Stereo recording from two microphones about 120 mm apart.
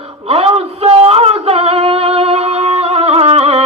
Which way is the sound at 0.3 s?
55° right (ahead or behind).